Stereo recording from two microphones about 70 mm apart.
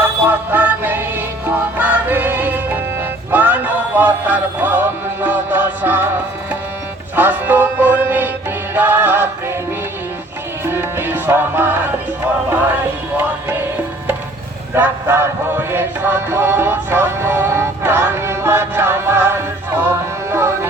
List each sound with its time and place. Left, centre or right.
0.0 s music: right
7.2 s music: right
10.7 s music: right
14.8 s music: right